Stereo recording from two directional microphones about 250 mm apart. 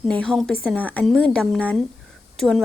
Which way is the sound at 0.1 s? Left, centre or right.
Centre.